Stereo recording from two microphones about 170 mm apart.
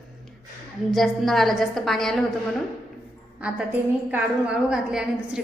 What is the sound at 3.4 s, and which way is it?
Speech, 5° right (ahead or behind).